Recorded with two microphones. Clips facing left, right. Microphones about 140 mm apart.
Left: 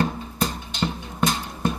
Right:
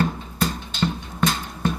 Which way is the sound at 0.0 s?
15° left (ahead or behind).